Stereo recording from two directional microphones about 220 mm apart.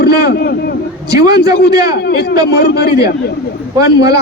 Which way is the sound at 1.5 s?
45° left (ahead or behind).